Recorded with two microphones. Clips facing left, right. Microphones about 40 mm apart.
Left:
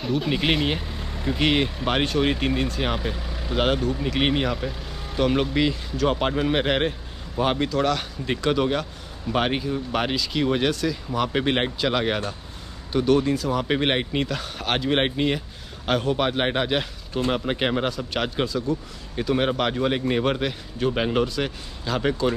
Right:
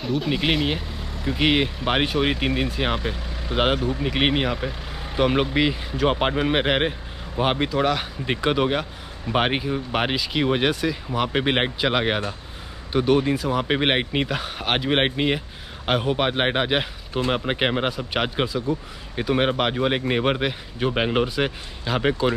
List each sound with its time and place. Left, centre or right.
0.0 s speech: centre
1.3 s speech: centre
3.5 s speech: centre